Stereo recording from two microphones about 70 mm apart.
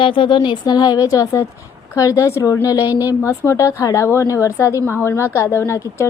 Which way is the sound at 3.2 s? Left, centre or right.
Left.